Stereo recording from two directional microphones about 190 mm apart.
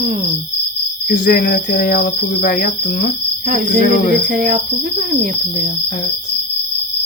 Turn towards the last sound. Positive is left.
turn(degrees=-45)  # may be behind; listen again after turning